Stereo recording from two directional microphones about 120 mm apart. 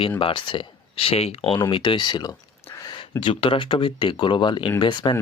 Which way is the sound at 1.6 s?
45° left (ahead or behind).